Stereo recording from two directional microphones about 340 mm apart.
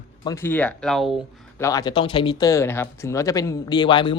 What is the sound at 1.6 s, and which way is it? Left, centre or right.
Speech, centre.